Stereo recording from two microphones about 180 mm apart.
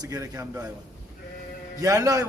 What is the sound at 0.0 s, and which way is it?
Speech, 20° right (ahead or behind).